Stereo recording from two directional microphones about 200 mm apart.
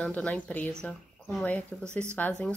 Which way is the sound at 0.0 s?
5° left (ahead or behind).